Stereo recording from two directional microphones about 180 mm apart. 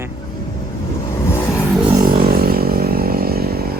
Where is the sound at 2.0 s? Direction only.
55° right (ahead or behind).